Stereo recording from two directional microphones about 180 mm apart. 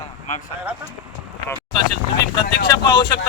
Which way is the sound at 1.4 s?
20° left (ahead or behind).